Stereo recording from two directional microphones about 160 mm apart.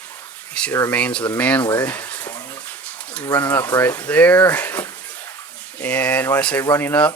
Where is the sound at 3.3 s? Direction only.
10° left (ahead or behind).